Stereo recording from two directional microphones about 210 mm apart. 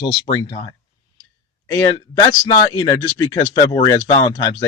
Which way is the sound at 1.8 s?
20° left (ahead or behind).